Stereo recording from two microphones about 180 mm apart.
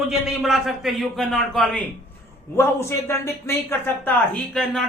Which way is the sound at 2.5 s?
15° left (ahead or behind).